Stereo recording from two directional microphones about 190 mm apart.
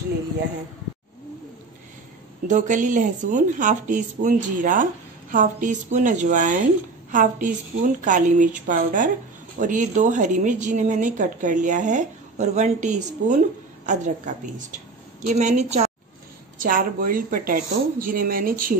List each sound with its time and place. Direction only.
2.4 s a woman's voice: 40° right (ahead or behind)